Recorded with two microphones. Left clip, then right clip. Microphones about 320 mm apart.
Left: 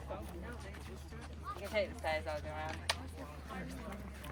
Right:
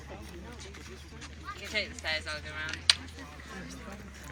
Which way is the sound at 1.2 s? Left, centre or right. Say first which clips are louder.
Right 3 dB; left.